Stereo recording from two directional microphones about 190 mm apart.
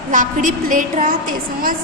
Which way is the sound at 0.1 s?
45° right (ahead or behind).